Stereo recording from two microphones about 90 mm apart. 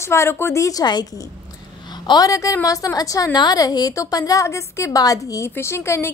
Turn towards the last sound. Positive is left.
turn(degrees=30)  # may be behind; listen again after turning